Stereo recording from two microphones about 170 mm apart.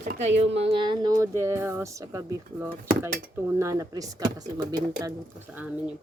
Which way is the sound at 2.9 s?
55° right (ahead or behind).